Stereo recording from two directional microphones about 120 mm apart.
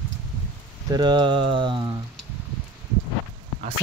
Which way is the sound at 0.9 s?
40° right (ahead or behind).